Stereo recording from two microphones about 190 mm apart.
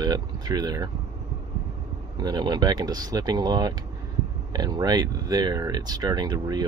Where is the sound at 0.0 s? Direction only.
20° right (ahead or behind).